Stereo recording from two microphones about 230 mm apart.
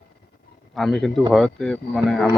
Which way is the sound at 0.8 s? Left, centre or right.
Centre.